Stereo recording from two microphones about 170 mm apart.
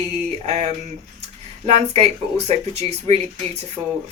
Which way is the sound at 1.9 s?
35° right (ahead or behind).